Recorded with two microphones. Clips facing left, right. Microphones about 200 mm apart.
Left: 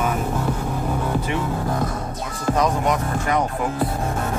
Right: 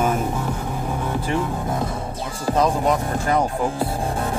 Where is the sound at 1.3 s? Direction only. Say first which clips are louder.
Even; 30° right (ahead or behind).